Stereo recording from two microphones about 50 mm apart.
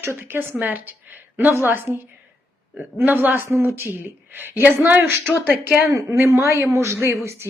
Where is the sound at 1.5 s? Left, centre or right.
Right.